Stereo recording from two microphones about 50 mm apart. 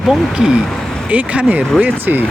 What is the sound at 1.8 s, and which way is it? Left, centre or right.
Speech, right.